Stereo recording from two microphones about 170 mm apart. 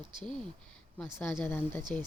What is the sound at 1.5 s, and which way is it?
Speech, 15° left (ahead or behind).